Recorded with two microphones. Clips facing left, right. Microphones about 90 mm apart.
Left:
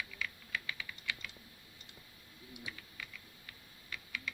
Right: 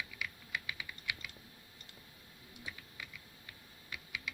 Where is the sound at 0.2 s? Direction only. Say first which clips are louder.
Left 1 dB; 15° right (ahead or behind).